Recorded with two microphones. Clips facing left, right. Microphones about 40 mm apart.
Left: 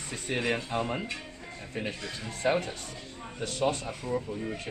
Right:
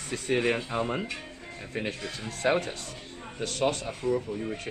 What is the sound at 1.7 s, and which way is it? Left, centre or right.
Speech, right.